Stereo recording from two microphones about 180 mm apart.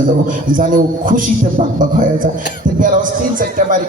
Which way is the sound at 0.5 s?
50° right (ahead or behind).